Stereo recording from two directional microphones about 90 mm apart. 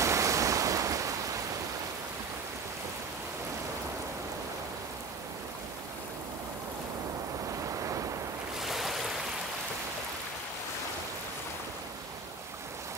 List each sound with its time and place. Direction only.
0.0 s waves: 35° right (ahead or behind)
7.6 s waves: 35° right (ahead or behind)
8.5 s waves: centre (ahead or behind)